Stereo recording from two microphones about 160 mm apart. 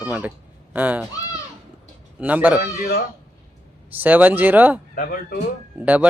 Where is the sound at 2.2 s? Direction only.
10° right (ahead or behind).